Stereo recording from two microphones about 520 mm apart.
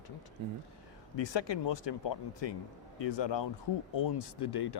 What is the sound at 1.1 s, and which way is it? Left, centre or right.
Speech, left.